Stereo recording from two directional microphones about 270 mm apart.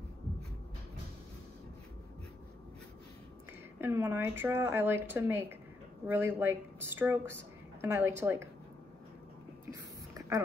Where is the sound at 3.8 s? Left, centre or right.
Centre.